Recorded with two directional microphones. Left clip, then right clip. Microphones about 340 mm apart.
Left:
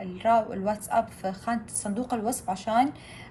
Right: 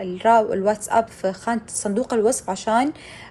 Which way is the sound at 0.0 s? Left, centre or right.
Right.